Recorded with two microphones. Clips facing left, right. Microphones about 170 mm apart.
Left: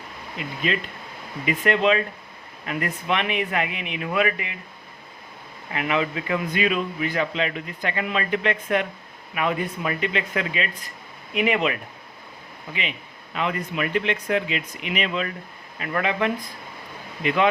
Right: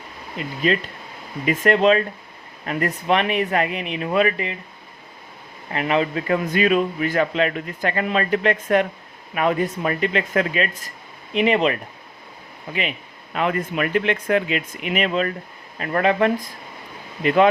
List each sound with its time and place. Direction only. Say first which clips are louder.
0.4 s speech: right 3 dB; 40° right (ahead or behind)
1.6 s speech: right 4 dB; 40° right (ahead or behind)
5.7 s a man's voice: right 4 dB; 35° right (ahead or behind)
11.3 s speech: right 4 dB; 30° right (ahead or behind)
13.3 s a man's voice: right 4 dB; 50° right (ahead or behind)